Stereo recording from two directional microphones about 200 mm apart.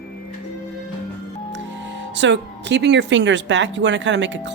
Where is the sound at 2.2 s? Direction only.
60° right (ahead or behind).